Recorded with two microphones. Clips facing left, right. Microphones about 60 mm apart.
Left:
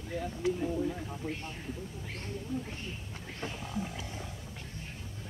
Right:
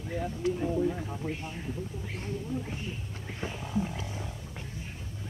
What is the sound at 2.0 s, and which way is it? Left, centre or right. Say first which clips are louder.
Speech: right 2 dB; centre.